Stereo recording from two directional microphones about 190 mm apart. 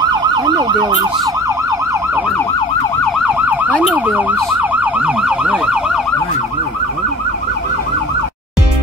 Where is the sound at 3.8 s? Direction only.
5° right (ahead or behind).